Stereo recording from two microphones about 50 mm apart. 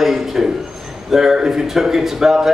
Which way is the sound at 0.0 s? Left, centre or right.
Centre.